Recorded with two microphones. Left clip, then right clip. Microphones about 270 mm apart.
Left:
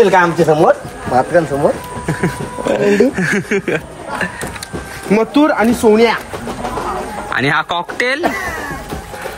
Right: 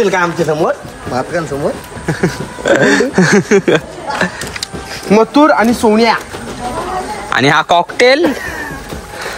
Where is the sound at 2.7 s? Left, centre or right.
Right.